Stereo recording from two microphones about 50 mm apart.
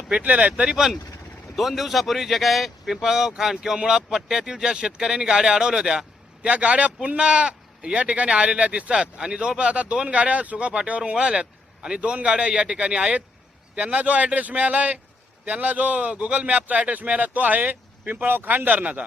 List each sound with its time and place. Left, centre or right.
0.1 s speech: right
1.5 s a man's voice: centre; by 19.0 s right